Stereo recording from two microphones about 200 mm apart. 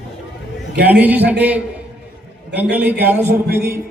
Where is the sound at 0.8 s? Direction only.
10° right (ahead or behind).